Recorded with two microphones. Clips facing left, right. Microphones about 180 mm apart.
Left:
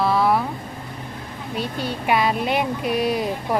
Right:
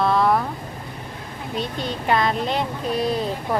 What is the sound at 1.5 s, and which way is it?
Speech, 10° left (ahead or behind).